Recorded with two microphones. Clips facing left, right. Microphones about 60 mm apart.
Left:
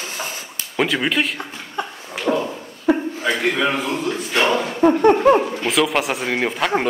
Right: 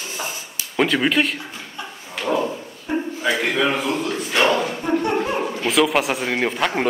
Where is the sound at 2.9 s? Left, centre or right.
Left.